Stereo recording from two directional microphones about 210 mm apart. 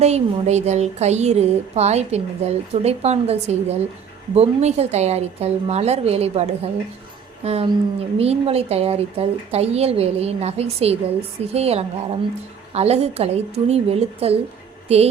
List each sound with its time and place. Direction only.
0.0 s speech: 30° right (ahead or behind)